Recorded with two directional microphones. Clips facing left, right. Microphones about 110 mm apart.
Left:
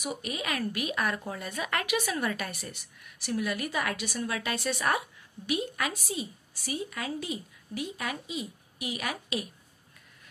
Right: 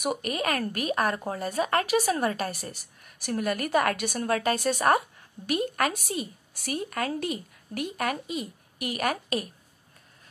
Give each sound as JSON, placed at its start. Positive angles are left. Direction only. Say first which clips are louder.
{"t": 0.0, "sound": "speech", "louder": "right 6 dB", "side_deg": -55}